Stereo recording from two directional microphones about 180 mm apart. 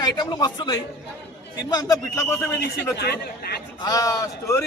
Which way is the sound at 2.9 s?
65° left (ahead or behind).